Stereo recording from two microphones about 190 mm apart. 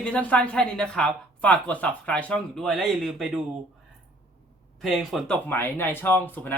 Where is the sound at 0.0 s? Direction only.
5° left (ahead or behind).